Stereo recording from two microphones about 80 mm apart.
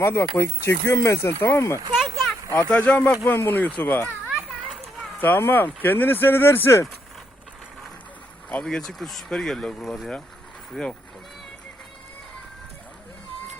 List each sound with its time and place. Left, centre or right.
0.0 s speech: left
1.9 s a sound: centre
2.6 s speech: centre
5.2 s speech: left
8.6 s speech: centre